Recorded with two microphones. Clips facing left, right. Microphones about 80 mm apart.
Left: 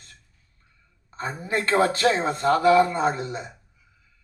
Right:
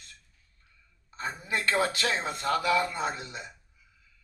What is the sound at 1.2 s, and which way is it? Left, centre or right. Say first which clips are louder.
Speech: left 5 dB; left.